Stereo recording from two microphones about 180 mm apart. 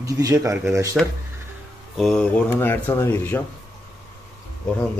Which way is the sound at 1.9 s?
5° left (ahead or behind).